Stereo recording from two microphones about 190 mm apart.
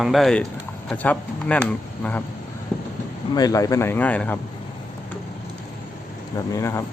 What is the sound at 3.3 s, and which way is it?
Speech, 20° left (ahead or behind).